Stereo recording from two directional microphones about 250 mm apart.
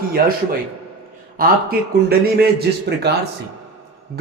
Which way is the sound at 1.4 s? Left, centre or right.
Right.